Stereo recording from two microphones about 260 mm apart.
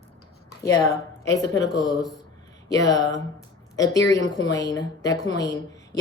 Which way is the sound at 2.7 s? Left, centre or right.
Centre.